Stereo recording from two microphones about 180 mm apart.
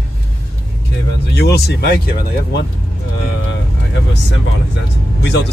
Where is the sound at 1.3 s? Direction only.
65° left (ahead or behind).